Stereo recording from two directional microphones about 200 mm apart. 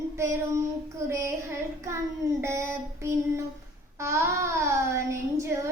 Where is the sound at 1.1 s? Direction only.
15° right (ahead or behind).